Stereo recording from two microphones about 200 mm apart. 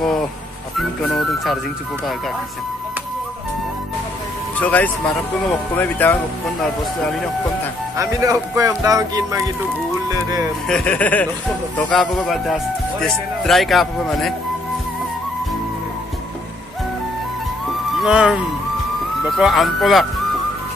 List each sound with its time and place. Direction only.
0.7 s speech: centre (ahead or behind)
4.6 s speech: 10° left (ahead or behind)
7.9 s speech: 15° right (ahead or behind)
10.7 s speech: 5° left (ahead or behind)
17.9 s speech: 5° right (ahead or behind)